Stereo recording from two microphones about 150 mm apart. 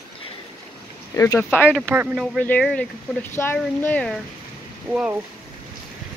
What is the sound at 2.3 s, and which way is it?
Speech, 5° left (ahead or behind).